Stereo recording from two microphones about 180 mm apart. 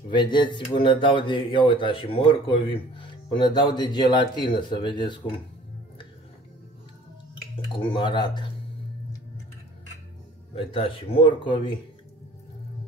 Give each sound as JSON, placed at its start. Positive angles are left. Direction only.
{"t": 0.1, "sound": "speech", "side_deg": 25}
{"t": 7.5, "sound": "speech", "side_deg": 30}
{"t": 10.5, "sound": "speech", "side_deg": 30}